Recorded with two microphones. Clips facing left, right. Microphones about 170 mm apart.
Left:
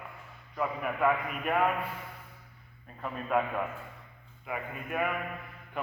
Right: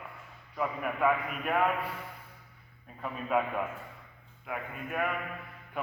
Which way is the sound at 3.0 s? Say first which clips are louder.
Even; centre (ahead or behind).